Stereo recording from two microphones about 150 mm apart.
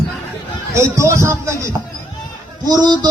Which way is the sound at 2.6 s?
25° right (ahead or behind).